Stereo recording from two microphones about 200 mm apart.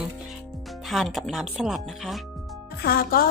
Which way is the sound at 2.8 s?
45° left (ahead or behind).